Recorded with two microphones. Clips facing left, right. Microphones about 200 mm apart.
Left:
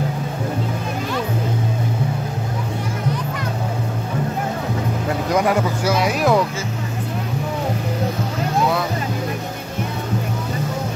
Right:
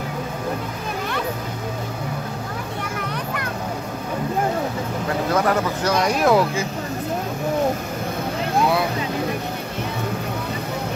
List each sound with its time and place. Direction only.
5.3 s speech: 10° left (ahead or behind)